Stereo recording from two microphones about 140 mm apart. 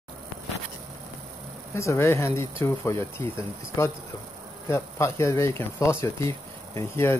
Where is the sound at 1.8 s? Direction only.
20° left (ahead or behind).